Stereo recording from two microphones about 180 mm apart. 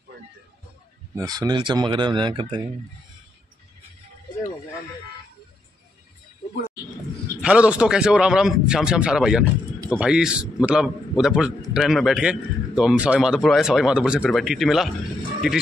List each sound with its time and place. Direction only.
1.1 s speech: 20° right (ahead or behind)
7.4 s a man's voice: 5° right (ahead or behind)